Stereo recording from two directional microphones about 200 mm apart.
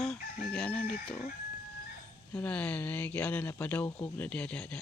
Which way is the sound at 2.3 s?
5° left (ahead or behind).